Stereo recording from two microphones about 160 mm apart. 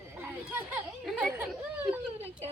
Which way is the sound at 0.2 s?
10° right (ahead or behind).